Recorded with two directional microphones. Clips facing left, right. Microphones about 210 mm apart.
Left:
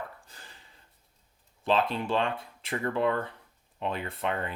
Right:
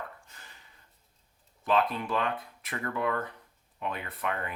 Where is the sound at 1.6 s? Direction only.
30° left (ahead or behind).